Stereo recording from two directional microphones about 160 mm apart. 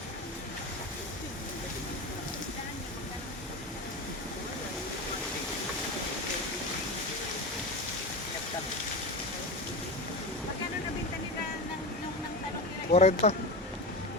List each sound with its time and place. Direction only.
12.9 s speech: 45° left (ahead or behind)